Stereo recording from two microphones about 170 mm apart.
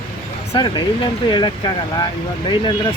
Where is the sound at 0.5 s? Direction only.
25° left (ahead or behind).